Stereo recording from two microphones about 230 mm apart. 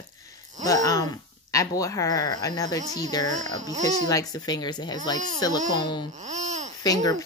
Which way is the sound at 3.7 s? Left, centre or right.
Right.